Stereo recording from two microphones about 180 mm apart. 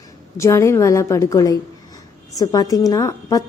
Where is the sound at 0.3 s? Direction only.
15° left (ahead or behind).